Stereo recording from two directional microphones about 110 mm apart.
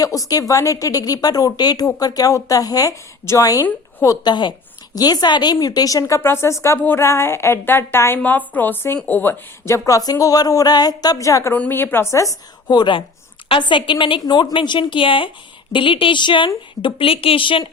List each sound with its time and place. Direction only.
0.0 s a woman's voice: 35° left (ahead or behind)
11.5 s a woman's voice: 15° left (ahead or behind); by 14.2 s 50° left (ahead or behind)
14.2 s speech: 40° left (ahead or behind)
16.8 s a woman's voice: 55° left (ahead or behind)